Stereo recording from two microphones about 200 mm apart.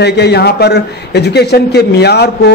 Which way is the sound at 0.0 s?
55° left (ahead or behind).